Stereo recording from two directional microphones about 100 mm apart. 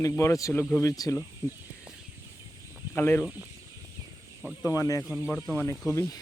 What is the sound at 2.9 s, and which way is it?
Speech, 25° left (ahead or behind).